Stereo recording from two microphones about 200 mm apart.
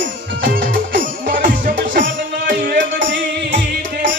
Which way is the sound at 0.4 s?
45° right (ahead or behind).